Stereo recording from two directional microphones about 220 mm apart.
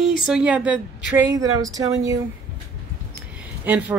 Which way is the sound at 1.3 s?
15° right (ahead or behind).